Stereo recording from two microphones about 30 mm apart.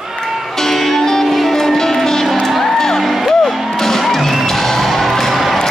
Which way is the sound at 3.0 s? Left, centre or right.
Centre.